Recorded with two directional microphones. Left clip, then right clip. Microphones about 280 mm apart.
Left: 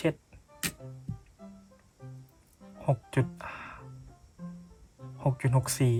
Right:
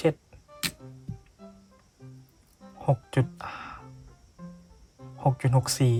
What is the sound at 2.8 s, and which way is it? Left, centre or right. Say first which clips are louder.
Music: right 3 dB; centre.